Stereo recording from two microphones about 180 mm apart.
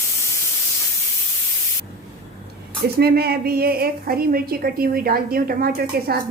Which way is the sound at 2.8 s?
60° right (ahead or behind).